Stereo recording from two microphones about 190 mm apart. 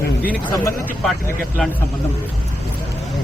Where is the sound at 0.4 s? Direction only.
15° left (ahead or behind).